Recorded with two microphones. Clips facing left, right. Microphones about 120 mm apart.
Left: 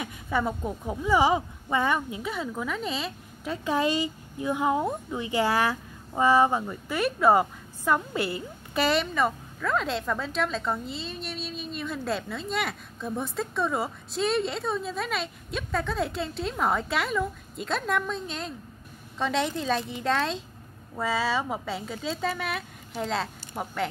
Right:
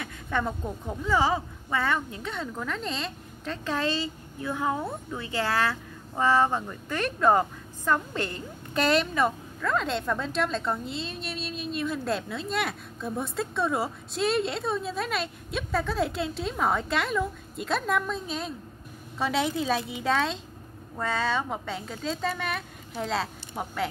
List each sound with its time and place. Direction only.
0.0 s a woman's voice: 10° left (ahead or behind)